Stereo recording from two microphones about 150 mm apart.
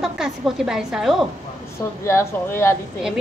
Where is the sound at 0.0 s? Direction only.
5° right (ahead or behind).